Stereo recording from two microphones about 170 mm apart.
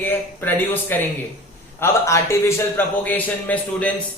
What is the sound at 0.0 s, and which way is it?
A man's voice, 10° left (ahead or behind).